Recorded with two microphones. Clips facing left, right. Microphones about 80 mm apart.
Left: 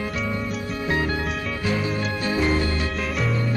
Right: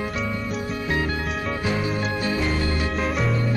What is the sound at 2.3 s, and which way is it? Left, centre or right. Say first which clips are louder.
Music: left 5 dB; left.